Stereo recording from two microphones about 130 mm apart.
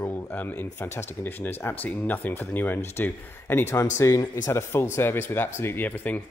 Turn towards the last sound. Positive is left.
turn(degrees=10)  # may be behind; listen again after turning